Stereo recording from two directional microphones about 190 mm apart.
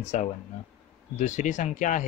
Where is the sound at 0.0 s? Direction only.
40° left (ahead or behind).